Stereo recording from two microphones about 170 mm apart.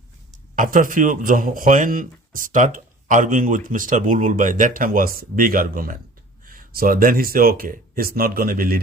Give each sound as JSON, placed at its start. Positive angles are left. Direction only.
{"t": 0.5, "sound": "speech", "side_deg": -50}